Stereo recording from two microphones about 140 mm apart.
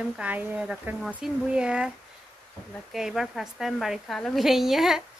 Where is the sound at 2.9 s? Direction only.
Centre (ahead or behind).